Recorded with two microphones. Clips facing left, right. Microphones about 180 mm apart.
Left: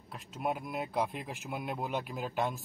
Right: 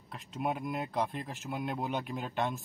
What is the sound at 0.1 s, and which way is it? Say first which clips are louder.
A man's voice: right 1 dB; centre (ahead or behind).